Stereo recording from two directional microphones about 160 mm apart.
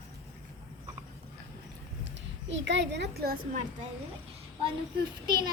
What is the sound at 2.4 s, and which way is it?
Speech, 90° right.